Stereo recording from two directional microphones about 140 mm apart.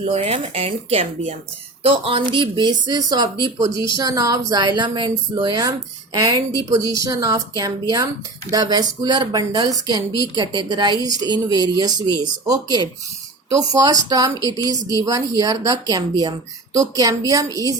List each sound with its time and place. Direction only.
0.0 s a woman's voice: 45° right (ahead or behind); by 17.7 s 25° right (ahead or behind)